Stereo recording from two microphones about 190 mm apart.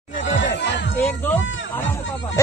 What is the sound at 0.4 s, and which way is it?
Music, 70° left (ahead or behind).